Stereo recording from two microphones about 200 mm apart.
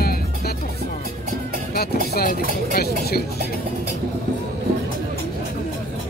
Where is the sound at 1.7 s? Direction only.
50° left (ahead or behind).